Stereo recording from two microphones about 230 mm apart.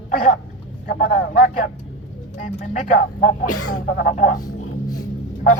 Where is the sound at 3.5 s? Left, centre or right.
Left.